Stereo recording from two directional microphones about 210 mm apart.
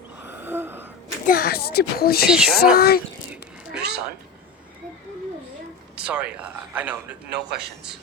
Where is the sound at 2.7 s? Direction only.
45° left (ahead or behind).